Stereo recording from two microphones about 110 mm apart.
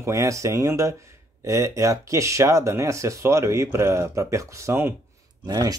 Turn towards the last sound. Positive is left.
turn(degrees=-35)  # may be behind; listen again after turning